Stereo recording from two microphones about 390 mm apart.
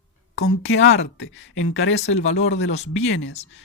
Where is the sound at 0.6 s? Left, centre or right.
Left.